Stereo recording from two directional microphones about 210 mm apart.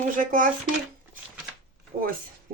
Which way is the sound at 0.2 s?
40° right (ahead or behind).